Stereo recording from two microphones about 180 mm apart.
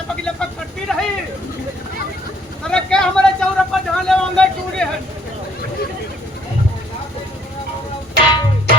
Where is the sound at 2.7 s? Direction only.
5° left (ahead or behind).